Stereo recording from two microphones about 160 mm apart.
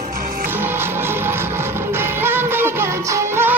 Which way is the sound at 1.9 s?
15° right (ahead or behind).